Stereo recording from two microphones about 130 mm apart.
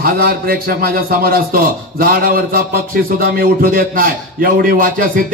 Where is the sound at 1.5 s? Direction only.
90° right.